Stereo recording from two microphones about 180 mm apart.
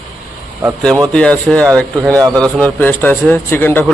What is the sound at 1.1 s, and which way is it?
Speech, 5° left (ahead or behind).